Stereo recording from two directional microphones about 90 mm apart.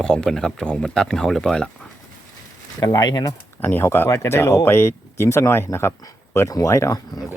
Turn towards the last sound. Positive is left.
turn(degrees=40)  # may be behind; listen again after turning